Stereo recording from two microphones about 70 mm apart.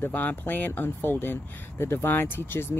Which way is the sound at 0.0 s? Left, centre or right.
Left.